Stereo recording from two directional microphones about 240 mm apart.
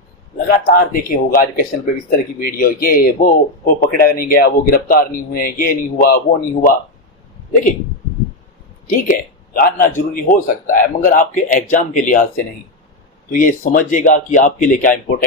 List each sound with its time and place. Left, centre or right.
0.5 s speech: left
8.8 s speech: left
13.3 s speech: left